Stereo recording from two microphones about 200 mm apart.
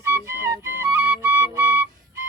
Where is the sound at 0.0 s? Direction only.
15° right (ahead or behind).